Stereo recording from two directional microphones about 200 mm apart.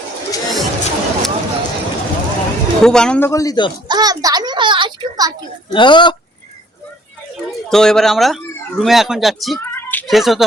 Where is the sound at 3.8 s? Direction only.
20° right (ahead or behind).